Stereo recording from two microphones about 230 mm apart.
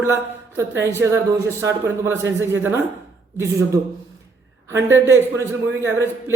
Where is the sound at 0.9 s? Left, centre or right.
Centre.